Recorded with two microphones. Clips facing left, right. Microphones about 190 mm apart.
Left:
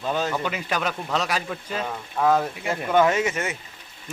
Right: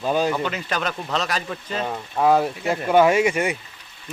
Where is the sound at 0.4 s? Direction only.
10° left (ahead or behind).